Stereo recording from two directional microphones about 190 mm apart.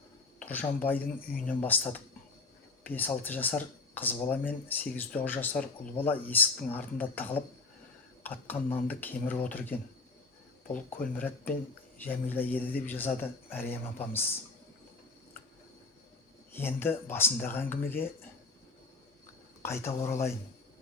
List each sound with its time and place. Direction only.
0.3 s speech: 10° left (ahead or behind)
16.6 s speech: 10° left (ahead or behind)
19.6 s speech: 15° left (ahead or behind)